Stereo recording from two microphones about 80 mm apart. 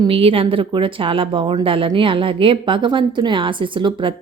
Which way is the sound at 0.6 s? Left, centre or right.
Right.